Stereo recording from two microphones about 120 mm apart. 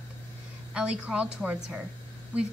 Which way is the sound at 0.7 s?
10° right (ahead or behind).